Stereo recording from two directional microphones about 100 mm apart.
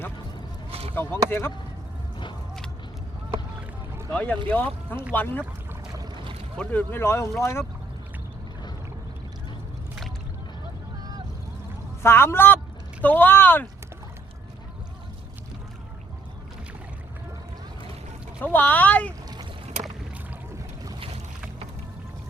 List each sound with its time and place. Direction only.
0.7 s a sound: 80° right
1.3 s speech: 20° left (ahead or behind)
4.1 s speech: 15° left (ahead or behind)
6.6 s speech: 15° left (ahead or behind)
12.0 s speech: 25° left (ahead or behind)
18.4 s speech: 20° left (ahead or behind)